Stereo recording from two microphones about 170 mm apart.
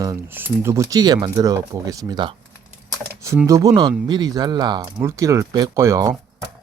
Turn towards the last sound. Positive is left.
turn(degrees=-20)  # may be behind; listen again after turning